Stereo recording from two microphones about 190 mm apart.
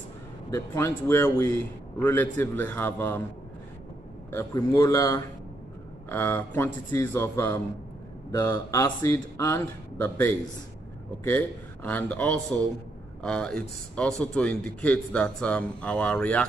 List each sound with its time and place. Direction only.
0.5 s a man's voice: 15° left (ahead or behind)
4.3 s a man's voice: 15° left (ahead or behind)